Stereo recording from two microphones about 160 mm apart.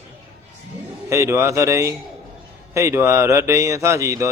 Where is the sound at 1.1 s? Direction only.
15° right (ahead or behind).